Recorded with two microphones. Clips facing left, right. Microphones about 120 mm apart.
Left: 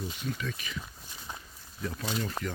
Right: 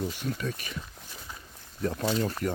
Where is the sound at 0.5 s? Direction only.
50° right (ahead or behind).